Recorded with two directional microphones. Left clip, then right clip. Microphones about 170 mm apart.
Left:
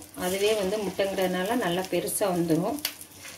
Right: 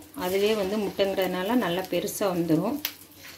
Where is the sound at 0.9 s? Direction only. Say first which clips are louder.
Right 3 dB; 50° right (ahead or behind).